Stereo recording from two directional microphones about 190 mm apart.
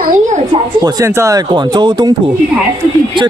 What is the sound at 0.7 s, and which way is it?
Speech, 20° right (ahead or behind).